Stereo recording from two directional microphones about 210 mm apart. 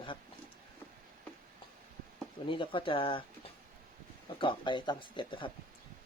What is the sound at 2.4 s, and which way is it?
Speech, 25° left (ahead or behind).